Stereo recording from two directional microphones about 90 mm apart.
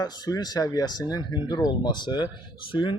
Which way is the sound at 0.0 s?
50° left (ahead or behind).